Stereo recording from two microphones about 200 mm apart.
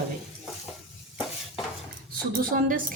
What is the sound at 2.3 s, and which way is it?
Speech, 45° right (ahead or behind).